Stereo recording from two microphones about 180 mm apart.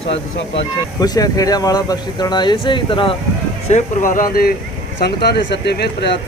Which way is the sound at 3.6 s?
45° left (ahead or behind).